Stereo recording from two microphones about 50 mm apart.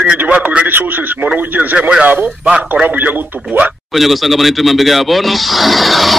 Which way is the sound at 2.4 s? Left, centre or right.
Right.